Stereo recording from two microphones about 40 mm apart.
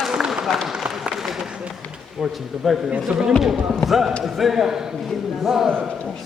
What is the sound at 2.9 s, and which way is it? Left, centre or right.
Speech, centre.